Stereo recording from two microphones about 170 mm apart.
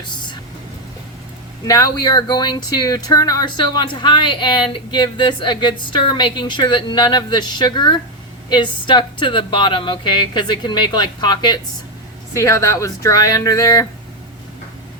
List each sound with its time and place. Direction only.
1.6 s speech: 20° left (ahead or behind)